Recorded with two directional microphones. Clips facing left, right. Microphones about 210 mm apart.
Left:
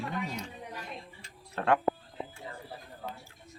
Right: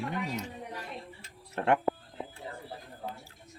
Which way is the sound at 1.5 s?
25° right (ahead or behind).